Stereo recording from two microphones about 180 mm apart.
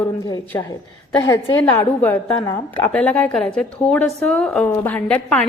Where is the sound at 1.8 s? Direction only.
10° left (ahead or behind).